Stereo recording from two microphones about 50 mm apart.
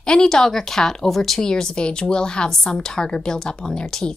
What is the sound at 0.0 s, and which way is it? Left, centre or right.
Speech, centre.